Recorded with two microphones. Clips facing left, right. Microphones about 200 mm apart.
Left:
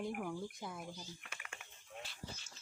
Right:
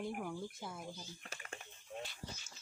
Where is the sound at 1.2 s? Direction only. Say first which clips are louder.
Right 4 dB; 35° right (ahead or behind).